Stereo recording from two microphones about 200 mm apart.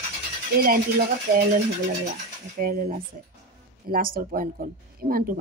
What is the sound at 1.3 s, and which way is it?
Speech, 50° right (ahead or behind).